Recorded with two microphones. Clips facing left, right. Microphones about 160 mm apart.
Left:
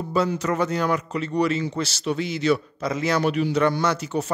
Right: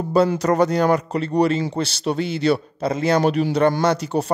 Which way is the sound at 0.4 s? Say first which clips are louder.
Right 6 dB; 35° right (ahead or behind).